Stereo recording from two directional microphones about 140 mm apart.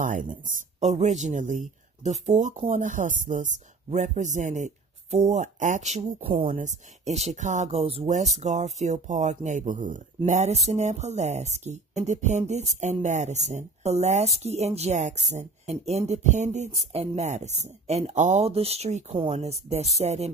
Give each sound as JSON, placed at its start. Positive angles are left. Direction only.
{"t": 0.0, "sound": "speech", "side_deg": -65}
{"t": 6.2, "sound": "speech", "side_deg": -40}
{"t": 6.5, "sound": "speech", "side_deg": -55}